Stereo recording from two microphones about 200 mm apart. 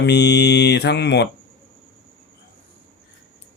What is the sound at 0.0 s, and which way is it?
Speech, 60° left (ahead or behind).